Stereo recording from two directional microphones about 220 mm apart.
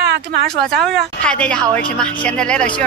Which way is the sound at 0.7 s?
Centre (ahead or behind).